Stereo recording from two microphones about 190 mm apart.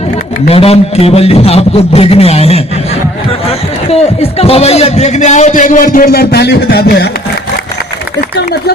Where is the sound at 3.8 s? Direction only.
30° left (ahead or behind); by 7.1 s 60° left (ahead or behind).